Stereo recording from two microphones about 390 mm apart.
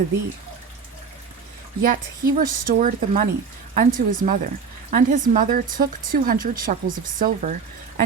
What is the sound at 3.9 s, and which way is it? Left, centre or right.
Speech, right.